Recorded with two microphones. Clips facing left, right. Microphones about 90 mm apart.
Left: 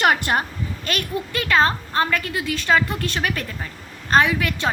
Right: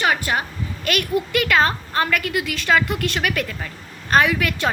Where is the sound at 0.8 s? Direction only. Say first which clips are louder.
Right 5 dB; 30° left (ahead or behind).